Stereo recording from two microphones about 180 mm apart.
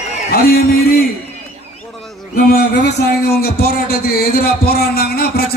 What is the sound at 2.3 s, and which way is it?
A man's voice, 60° left (ahead or behind).